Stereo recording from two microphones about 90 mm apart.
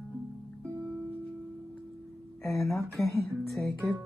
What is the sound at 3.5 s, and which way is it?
Music, centre (ahead or behind).